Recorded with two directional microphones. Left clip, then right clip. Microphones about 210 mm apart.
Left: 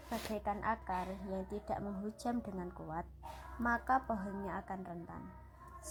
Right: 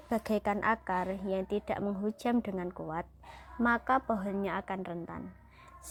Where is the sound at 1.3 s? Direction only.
40° right (ahead or behind).